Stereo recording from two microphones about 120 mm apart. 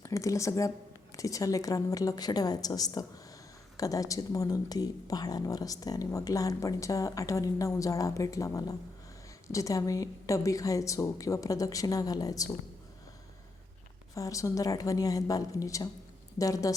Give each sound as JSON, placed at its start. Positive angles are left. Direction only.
{"t": 0.0, "sound": "a woman's voice", "side_deg": 25}
{"t": 14.2, "sound": "speech", "side_deg": 25}